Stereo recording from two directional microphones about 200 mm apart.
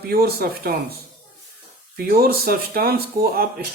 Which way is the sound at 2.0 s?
50° right (ahead or behind).